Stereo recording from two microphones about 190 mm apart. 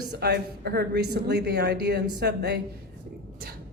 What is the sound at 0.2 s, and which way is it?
Speech, 55° right (ahead or behind).